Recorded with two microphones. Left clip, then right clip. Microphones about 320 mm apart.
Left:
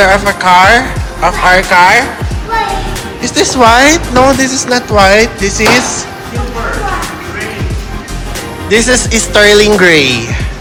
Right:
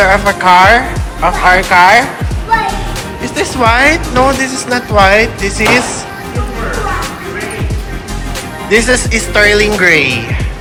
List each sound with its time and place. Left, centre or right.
0.0 s a woman's voice: centre
3.2 s a woman's voice: centre
8.7 s a woman's voice: centre